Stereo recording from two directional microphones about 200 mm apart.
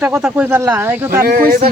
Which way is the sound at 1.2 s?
50° right (ahead or behind).